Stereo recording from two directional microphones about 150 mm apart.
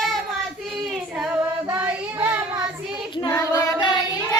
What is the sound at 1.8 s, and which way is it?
Child singing, 10° right (ahead or behind).